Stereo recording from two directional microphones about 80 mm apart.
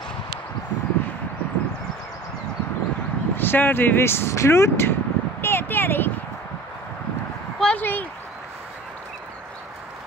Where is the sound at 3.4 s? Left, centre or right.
Left.